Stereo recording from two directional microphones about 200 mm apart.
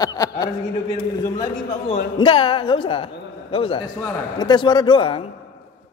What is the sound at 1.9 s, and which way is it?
A woman's voice, 25° left (ahead or behind).